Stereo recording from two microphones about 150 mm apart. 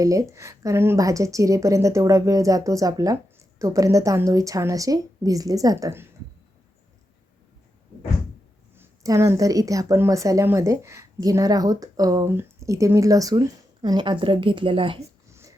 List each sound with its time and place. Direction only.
0.0 s a woman's voice: 20° right (ahead or behind)
8.7 s a woman's voice: 15° right (ahead or behind); by 14.9 s 35° right (ahead or behind)
15.3 s a sound: 20° right (ahead or behind)